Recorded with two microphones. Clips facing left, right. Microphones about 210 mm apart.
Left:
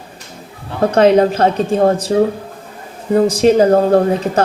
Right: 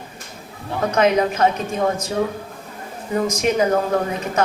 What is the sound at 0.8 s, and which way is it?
A woman's voice, 30° left (ahead or behind).